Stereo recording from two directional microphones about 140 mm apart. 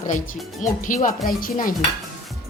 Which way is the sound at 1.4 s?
80° left.